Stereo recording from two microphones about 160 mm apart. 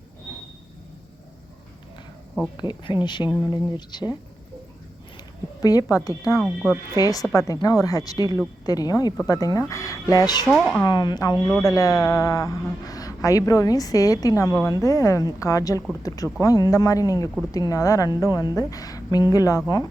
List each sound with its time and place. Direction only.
2.6 s a woman's voice: 30° left (ahead or behind)
5.6 s a woman's voice: 20° left (ahead or behind)
6.4 s speech: 5° left (ahead or behind)
6.9 s a woman's voice: 20° left (ahead or behind)
10.5 s speech: 5° left (ahead or behind)
10.8 s a woman's voice: 25° left (ahead or behind)